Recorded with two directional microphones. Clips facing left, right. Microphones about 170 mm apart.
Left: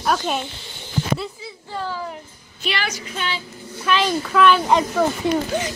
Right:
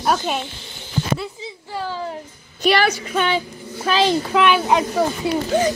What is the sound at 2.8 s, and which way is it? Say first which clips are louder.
A woman's voice: right 8 dB; 55° right (ahead or behind).